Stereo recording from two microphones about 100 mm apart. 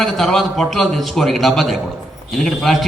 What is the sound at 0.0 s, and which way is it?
A man's voice, centre (ahead or behind).